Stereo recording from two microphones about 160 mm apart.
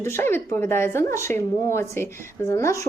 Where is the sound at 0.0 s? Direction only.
15° left (ahead or behind).